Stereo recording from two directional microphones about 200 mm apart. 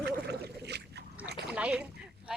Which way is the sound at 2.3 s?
5° right (ahead or behind).